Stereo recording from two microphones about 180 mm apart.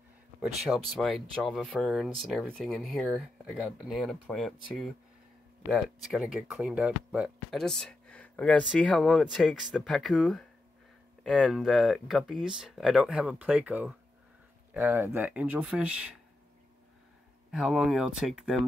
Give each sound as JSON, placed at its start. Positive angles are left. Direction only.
{"t": 0.4, "sound": "speech", "side_deg": 0}
{"t": 17.5, "sound": "speech", "side_deg": -5}